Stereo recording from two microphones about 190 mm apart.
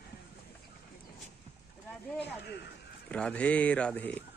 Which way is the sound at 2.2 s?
60° left (ahead or behind).